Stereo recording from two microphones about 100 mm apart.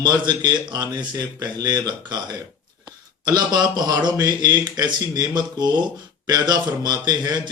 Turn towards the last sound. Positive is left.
turn(degrees=-40)  # may be behind; listen again after turning